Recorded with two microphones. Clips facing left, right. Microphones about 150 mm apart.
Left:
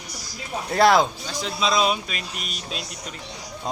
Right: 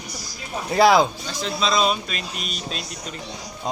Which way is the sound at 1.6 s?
10° left (ahead or behind).